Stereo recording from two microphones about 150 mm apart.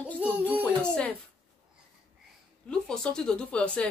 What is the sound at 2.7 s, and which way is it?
A woman's voice, 5° left (ahead or behind).